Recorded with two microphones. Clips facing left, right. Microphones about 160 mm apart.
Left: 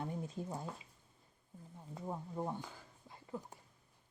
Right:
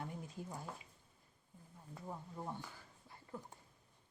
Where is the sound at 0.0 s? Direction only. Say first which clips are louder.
Left 5 dB; 25° left (ahead or behind).